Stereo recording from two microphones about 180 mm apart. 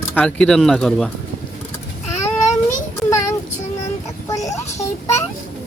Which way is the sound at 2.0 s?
15° left (ahead or behind).